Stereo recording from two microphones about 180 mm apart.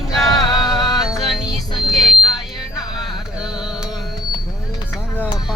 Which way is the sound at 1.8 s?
Centre (ahead or behind).